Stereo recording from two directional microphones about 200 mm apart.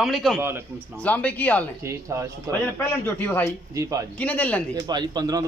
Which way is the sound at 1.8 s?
15° right (ahead or behind).